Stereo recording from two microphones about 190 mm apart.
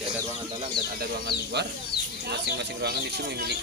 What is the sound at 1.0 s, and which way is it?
Speech, 60° right (ahead or behind).